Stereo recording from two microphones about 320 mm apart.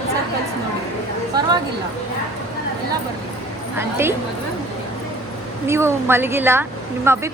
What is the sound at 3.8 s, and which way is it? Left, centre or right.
Speech, centre.